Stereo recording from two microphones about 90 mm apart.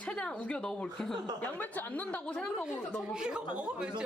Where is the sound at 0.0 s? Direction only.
10° left (ahead or behind).